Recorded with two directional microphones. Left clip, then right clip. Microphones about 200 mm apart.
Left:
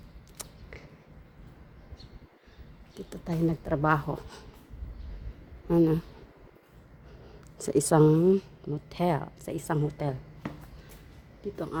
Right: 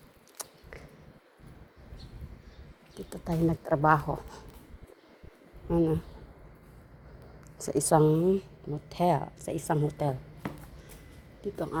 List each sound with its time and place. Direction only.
0.4 s biting: 35° left (ahead or behind)
3.4 s a woman's voice: 10° left (ahead or behind)
3.7 s speech: 25° left (ahead or behind)
5.6 s speech: 35° left (ahead or behind)
7.6 s speech: 45° left (ahead or behind)
8.0 s a woman's voice: 25° left (ahead or behind); by 10.2 s 10° left (ahead or behind)
11.5 s a woman's voice: 10° left (ahead or behind)